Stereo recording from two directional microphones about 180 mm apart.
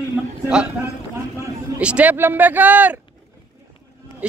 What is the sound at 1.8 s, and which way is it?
Speech, 5° right (ahead or behind).